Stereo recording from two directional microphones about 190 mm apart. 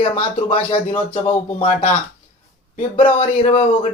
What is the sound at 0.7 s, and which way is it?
Speech, 10° left (ahead or behind).